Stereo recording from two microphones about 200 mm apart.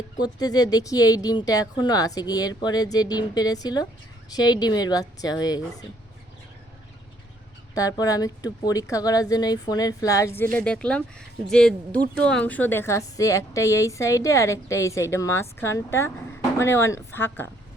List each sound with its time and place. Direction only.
0.2 s speech: 20° left (ahead or behind)
7.8 s a woman's voice: 15° left (ahead or behind)